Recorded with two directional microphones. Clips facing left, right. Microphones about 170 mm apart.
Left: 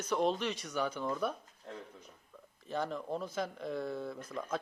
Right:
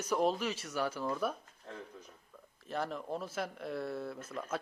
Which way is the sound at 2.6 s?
Centre (ahead or behind).